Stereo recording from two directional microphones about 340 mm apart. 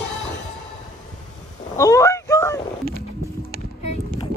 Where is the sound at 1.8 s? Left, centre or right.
Centre.